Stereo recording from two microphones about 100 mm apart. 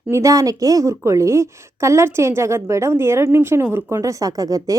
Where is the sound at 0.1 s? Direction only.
35° right (ahead or behind).